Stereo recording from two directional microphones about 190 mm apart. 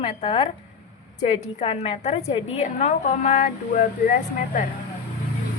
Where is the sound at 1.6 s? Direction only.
30° left (ahead or behind).